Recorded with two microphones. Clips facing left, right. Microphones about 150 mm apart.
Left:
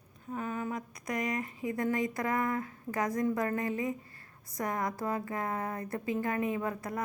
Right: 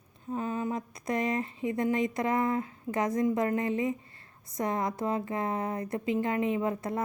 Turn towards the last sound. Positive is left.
turn(degrees=-25)  # may be behind; listen again after turning